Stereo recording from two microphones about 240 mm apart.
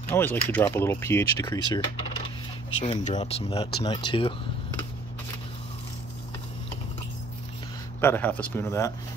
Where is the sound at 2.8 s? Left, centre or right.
Left.